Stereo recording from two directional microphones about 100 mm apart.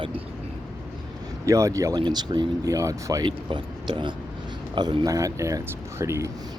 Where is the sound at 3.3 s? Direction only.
55° right (ahead or behind); by 6.3 s 30° right (ahead or behind).